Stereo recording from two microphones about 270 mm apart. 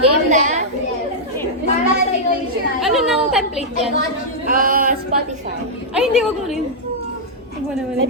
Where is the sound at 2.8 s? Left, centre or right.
Centre.